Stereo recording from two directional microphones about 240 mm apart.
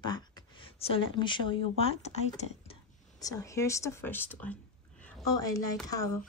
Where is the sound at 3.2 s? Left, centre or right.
Centre.